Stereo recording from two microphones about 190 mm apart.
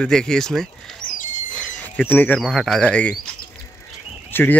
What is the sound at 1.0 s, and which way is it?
Squawk, 45° left (ahead or behind).